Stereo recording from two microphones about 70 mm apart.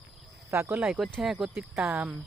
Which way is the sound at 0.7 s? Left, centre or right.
Centre.